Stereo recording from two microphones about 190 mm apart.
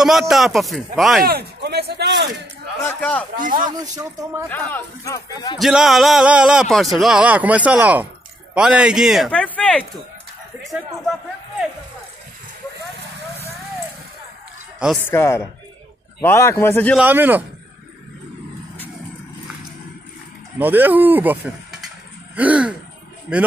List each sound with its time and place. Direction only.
0.0 s a man's voice: centre (ahead or behind)
1.2 s speech: 60° right (ahead or behind)
2.9 s speech: 5° left (ahead or behind)
3.3 s speech: 45° right (ahead or behind)
3.7 s speech: 20° right (ahead or behind)
4.5 s speech: 10° left (ahead or behind)
5.6 s a man's voice: centre (ahead or behind)
15.0 s speech: 15° left (ahead or behind)
16.9 s speech: 10° right (ahead or behind)
20.5 s a man's voice: 10° right (ahead or behind)